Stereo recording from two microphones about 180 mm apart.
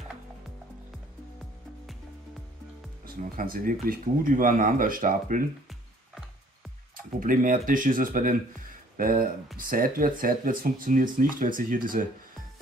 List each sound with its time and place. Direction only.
3.3 s speech: 50° right (ahead or behind)
7.2 s speech: 45° right (ahead or behind)